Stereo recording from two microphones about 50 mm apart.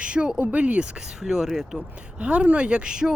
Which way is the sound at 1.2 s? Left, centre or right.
Centre.